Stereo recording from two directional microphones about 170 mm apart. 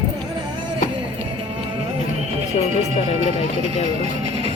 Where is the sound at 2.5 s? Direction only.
40° left (ahead or behind).